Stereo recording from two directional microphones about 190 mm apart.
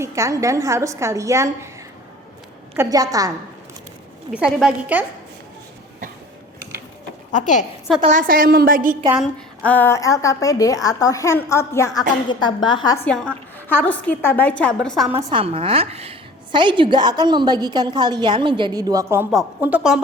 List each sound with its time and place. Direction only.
0.0 s a woman's voice: 15° right (ahead or behind)
2.7 s a woman's voice: 20° right (ahead or behind)
4.3 s a woman's voice: 5° right (ahead or behind)
7.3 s a woman's voice: 40° left (ahead or behind)
8.0 s a woman's voice: 45° right (ahead or behind)
9.1 s a woman's voice: 5° left (ahead or behind); by 13.0 s 20° left (ahead or behind)
13.1 s a woman's voice: 5° left (ahead or behind)
15.2 s a woman's voice: 25° right (ahead or behind); by 20.0 s 5° right (ahead or behind)